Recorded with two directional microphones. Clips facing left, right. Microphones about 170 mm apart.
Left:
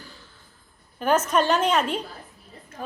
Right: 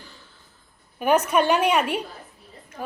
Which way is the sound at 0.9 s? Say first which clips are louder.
Right 2 dB; 15° right (ahead or behind).